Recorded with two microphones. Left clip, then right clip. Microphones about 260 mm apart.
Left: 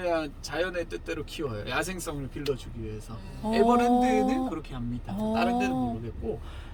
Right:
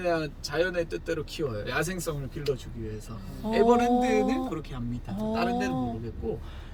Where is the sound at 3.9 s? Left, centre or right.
Centre.